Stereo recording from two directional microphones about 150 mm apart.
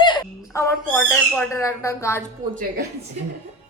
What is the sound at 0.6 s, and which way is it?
Owl, 10° left (ahead or behind).